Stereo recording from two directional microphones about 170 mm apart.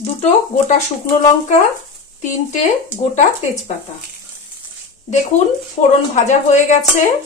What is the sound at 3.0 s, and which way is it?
Speech, 40° left (ahead or behind).